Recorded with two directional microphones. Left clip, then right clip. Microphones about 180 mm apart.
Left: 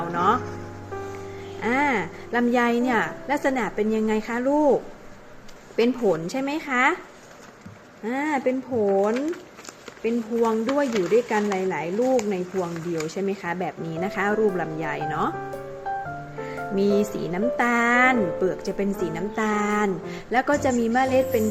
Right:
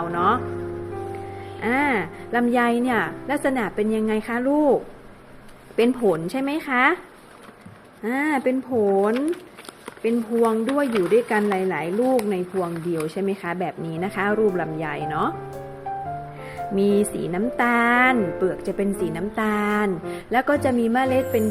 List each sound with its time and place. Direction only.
0.1 s music: 15° right (ahead or behind)
1.6 s a woman's voice: 20° right (ahead or behind)
8.0 s speech: 25° right (ahead or behind)
16.7 s speech: 20° right (ahead or behind)